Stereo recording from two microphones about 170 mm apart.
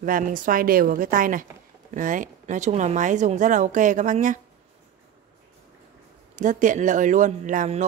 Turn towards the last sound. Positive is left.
turn(degrees=-50)  # may be behind; listen again after turning